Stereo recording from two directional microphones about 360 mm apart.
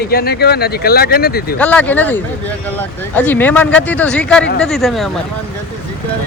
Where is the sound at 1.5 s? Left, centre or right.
Centre.